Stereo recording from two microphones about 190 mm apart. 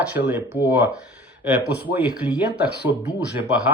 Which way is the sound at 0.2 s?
60° left (ahead or behind).